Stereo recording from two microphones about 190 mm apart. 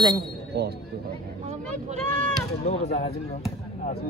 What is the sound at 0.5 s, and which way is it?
Speech, 55° right (ahead or behind).